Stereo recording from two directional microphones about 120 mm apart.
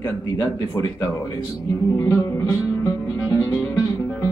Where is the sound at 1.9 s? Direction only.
25° left (ahead or behind).